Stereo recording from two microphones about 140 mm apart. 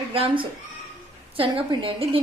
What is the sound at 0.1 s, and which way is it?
A woman's voice, 40° right (ahead or behind).